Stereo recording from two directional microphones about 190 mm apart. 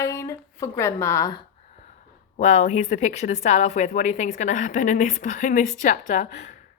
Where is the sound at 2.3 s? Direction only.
40° left (ahead or behind).